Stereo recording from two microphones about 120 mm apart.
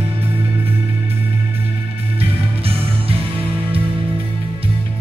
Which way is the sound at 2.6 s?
55° right (ahead or behind).